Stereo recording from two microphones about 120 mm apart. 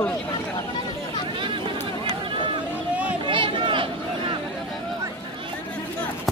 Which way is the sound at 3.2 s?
45° right (ahead or behind).